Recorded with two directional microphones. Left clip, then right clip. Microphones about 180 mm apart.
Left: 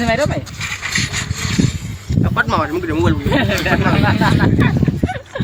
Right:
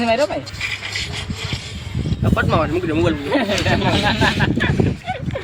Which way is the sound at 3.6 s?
Centre (ahead or behind).